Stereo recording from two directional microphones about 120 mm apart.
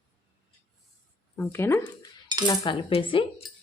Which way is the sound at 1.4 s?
20° left (ahead or behind).